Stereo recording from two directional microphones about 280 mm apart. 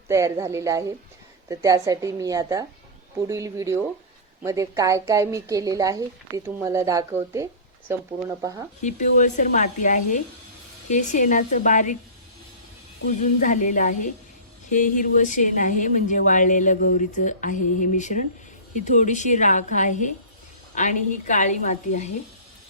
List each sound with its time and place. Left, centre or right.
0.1 s a woman's voice: centre
8.8 s speech: left
13.0 s speech: left
13.4 s speech: left